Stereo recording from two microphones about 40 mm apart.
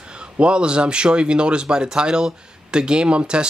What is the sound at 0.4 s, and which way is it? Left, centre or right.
Speech, right.